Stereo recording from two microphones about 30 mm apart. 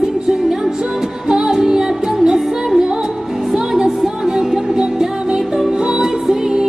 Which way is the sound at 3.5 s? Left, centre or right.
Centre.